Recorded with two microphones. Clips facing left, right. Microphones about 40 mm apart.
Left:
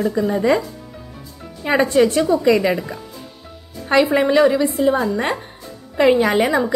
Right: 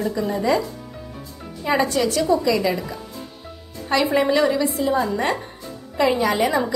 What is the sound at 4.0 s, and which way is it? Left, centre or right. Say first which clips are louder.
Speech: left 5 dB; centre.